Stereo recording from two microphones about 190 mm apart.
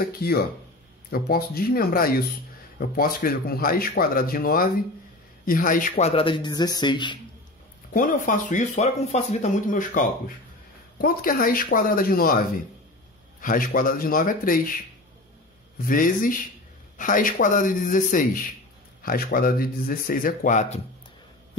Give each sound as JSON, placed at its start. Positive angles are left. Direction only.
{"t": 0.0, "sound": "a man's voice", "side_deg": 55}
{"t": 7.9, "sound": "speech", "side_deg": 45}
{"t": 13.4, "sound": "speech", "side_deg": 45}
{"t": 15.8, "sound": "speech", "side_deg": 45}